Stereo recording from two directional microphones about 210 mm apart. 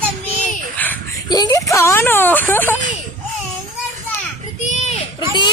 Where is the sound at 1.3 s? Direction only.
20° left (ahead or behind).